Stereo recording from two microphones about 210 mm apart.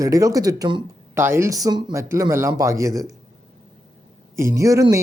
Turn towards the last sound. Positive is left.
turn(degrees=-15)  # may be behind; listen again after turning